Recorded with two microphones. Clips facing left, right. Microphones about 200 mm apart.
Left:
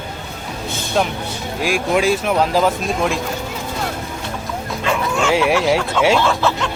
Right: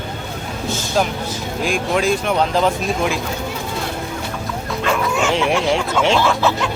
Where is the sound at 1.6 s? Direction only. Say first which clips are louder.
Left 2 dB; 5° left (ahead or behind).